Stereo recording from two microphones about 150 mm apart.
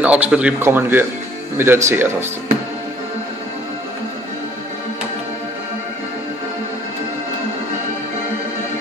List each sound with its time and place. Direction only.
0.0 s speech: 10° right (ahead or behind)